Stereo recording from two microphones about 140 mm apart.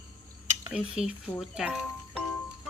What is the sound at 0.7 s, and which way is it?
Speech, 5° right (ahead or behind).